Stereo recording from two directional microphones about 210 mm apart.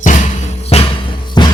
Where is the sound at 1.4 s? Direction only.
20° left (ahead or behind).